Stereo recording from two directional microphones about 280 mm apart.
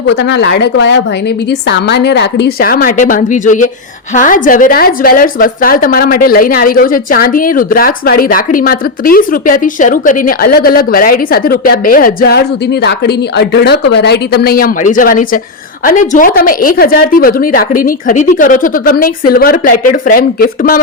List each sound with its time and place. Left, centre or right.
0.1 s a woman's voice: left